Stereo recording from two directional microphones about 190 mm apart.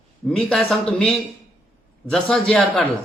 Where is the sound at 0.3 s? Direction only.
Centre (ahead or behind).